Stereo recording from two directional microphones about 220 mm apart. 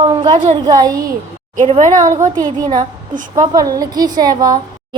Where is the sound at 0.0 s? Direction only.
25° right (ahead or behind).